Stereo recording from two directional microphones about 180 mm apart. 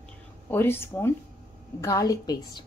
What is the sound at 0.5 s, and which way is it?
A woman's voice, 15° left (ahead or behind).